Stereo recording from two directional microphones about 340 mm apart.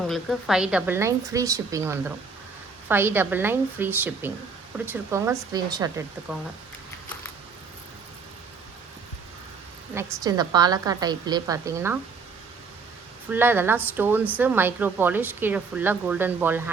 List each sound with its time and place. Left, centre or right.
0.1 s a woman's voice: centre
9.9 s a woman's voice: centre
13.3 s a woman's voice: centre